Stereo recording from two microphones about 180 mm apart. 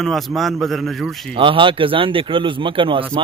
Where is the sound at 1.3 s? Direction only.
30° right (ahead or behind).